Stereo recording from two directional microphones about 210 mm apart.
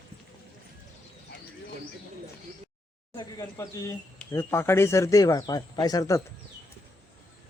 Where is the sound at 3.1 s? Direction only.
20° left (ahead or behind).